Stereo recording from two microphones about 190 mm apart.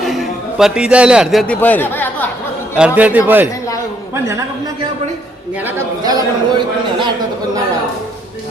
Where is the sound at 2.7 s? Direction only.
5° right (ahead or behind).